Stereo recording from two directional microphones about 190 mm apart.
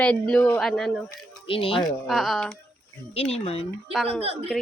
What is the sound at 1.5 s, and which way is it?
Speech, 30° left (ahead or behind).